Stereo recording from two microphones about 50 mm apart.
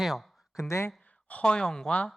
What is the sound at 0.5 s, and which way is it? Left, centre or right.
Speech, left.